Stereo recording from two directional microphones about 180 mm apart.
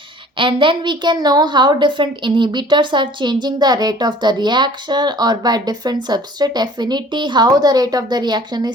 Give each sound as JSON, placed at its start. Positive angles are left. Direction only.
{"t": 0.3, "sound": "speech", "side_deg": -25}